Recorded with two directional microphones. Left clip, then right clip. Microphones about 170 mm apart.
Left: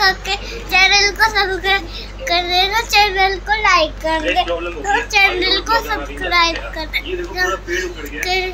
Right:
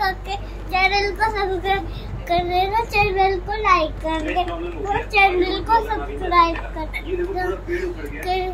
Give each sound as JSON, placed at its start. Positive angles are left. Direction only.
{"t": 0.0, "sound": "child singing", "side_deg": -20}
{"t": 2.2, "sound": "a child's voice", "side_deg": -15}